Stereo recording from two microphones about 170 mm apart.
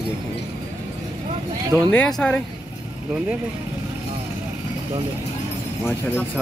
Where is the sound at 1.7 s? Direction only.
5° left (ahead or behind).